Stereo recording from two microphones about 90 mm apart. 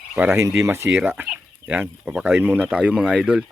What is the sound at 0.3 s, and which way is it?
Speech, 35° right (ahead or behind).